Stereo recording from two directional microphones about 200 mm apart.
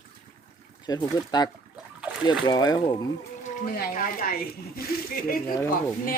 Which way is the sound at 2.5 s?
20° left (ahead or behind).